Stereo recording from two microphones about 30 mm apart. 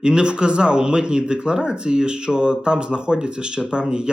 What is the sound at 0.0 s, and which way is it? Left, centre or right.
Speech, right.